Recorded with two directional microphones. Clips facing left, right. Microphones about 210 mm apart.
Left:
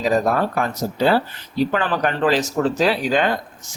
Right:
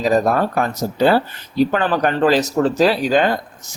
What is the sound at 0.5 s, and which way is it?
Speech, 40° right (ahead or behind).